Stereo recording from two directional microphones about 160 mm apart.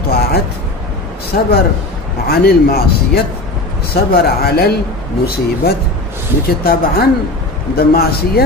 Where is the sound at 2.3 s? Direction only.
75° left (ahead or behind).